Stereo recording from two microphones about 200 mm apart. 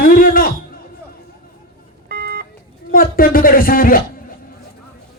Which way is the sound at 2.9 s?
45° left (ahead or behind).